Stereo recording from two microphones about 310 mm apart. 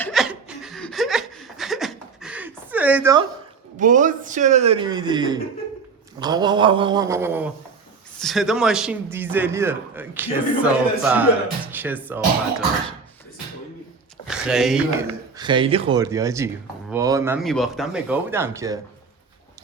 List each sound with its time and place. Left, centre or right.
0.0 s chuckle: centre
3.8 s a man's voice: right; by 12.6 s centre
14.3 s speech: centre
15.4 s speech: centre